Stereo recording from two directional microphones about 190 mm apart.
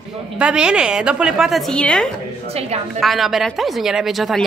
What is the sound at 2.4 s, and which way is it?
Speech, 35° right (ahead or behind).